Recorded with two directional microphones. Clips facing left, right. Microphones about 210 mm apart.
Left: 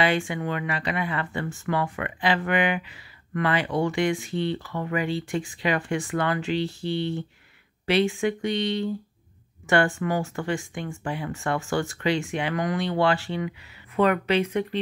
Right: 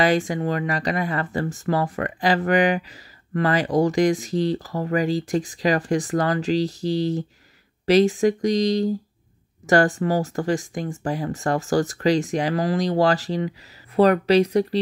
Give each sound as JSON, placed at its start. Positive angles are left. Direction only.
{"t": 0.0, "sound": "speech", "side_deg": -40}